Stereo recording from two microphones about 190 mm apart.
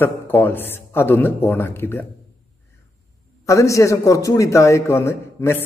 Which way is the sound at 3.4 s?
15° left (ahead or behind).